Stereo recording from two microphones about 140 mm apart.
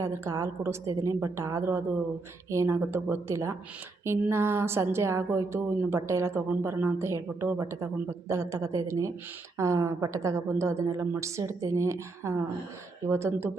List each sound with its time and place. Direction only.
0.0 s a woman's voice: 20° right (ahead or behind)